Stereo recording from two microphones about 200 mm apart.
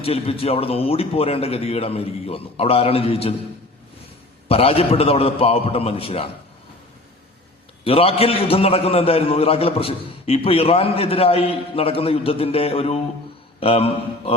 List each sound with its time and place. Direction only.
0.0 s a man's voice: 30° left (ahead or behind)
4.4 s a man's voice: 30° left (ahead or behind)
7.9 s a man's voice: 30° left (ahead or behind)